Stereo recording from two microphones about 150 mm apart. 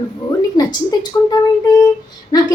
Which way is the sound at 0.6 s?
25° left (ahead or behind).